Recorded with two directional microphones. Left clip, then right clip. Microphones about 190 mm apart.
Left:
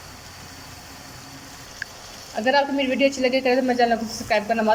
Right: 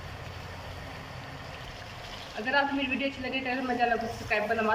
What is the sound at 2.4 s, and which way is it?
Speech, 40° left (ahead or behind).